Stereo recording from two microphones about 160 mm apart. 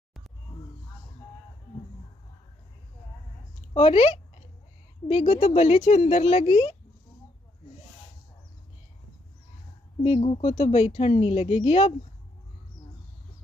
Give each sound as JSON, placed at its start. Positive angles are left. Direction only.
{"t": 3.7, "sound": "speech", "side_deg": 35}
{"t": 10.0, "sound": "speech", "side_deg": 35}